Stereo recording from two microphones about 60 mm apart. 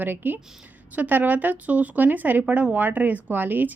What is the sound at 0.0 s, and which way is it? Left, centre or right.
Speech, right.